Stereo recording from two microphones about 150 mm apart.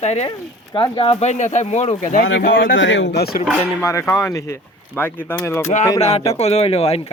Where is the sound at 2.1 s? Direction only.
60° left (ahead or behind).